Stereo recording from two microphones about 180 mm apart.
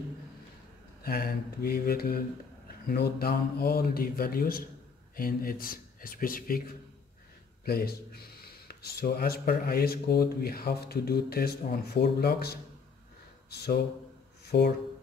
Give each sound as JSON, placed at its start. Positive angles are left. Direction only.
{"t": 1.0, "sound": "speech", "side_deg": 55}
{"t": 7.6, "sound": "speech", "side_deg": 60}
{"t": 14.4, "sound": "a sound", "side_deg": 65}